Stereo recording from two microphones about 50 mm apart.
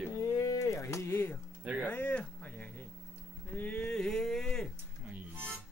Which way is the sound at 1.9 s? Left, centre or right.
Left.